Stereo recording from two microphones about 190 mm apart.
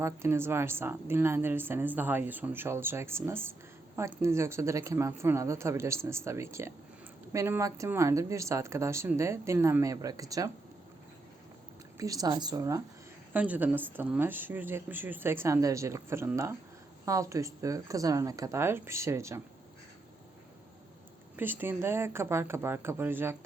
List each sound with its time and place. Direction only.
0.0 s a woman's voice: 15° right (ahead or behind)
11.9 s a woman's voice: 20° right (ahead or behind)
21.3 s a woman's voice: 10° right (ahead or behind)